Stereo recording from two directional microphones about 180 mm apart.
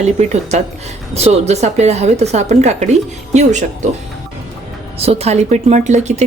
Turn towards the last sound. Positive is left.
turn(degrees=-40)  # may be behind; listen again after turning